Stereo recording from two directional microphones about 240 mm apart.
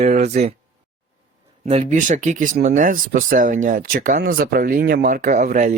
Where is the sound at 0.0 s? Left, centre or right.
Right.